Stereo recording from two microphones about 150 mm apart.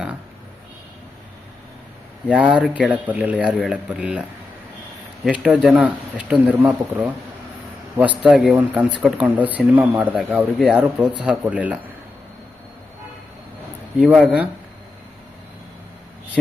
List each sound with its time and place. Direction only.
2.2 s speech: 5° right (ahead or behind)
8.2 s speech: centre (ahead or behind)
14.0 s speech: centre (ahead or behind)